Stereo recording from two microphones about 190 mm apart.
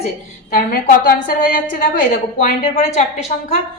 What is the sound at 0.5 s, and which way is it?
Speech, 45° left (ahead or behind).